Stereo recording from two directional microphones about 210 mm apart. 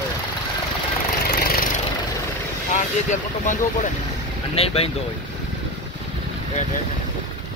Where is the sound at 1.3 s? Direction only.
45° left (ahead or behind).